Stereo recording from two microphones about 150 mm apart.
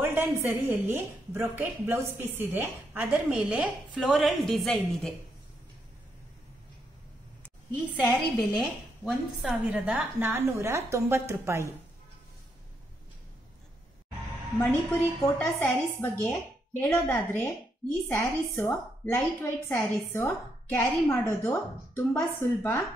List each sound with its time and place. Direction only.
0.0 s a woman's voice: 15° right (ahead or behind); by 5.1 s centre (ahead or behind)
7.4 s a woman's voice: 10° left (ahead or behind)
8.4 s a woman's voice: centre (ahead or behind); by 11.7 s 20° right (ahead or behind)
14.6 s a woman's voice: 15° left (ahead or behind)